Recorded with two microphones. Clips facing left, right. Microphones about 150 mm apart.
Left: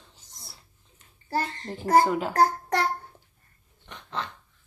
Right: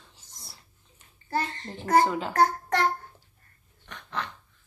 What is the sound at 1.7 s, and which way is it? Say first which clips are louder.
Speech: left 2 dB; 10° left (ahead or behind).